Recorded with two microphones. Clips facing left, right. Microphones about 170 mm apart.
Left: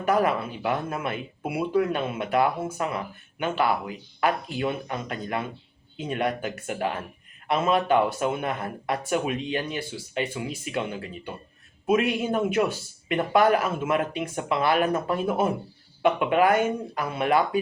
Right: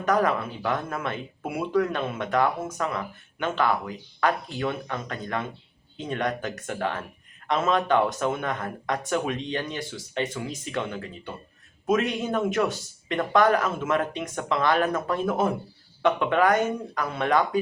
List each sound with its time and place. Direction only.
0.0 s speech: 10° left (ahead or behind)